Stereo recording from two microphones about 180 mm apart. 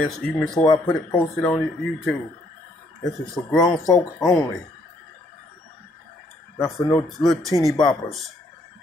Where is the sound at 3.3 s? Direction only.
5° left (ahead or behind).